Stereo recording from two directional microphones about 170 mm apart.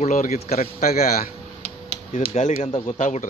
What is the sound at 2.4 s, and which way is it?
Speech, 40° left (ahead or behind).